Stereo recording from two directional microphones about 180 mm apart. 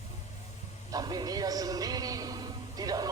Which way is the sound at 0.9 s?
20° right (ahead or behind).